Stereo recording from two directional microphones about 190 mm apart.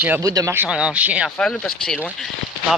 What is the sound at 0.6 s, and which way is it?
Speech, 5° right (ahead or behind).